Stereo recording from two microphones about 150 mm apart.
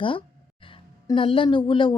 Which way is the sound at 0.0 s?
35° left (ahead or behind).